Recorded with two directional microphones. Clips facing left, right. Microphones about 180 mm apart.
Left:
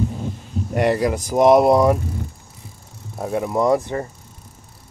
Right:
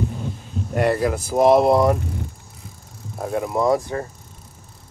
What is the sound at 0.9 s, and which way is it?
Speech, 15° left (ahead or behind).